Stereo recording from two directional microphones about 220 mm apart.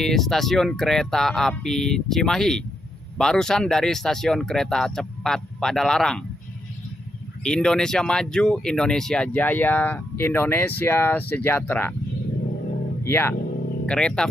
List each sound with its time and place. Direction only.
0.0 s speech: centre (ahead or behind)
7.4 s speech: 5° left (ahead or behind)
13.0 s speech: 10° left (ahead or behind)